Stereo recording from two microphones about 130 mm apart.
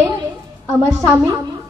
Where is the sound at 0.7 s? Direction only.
20° right (ahead or behind).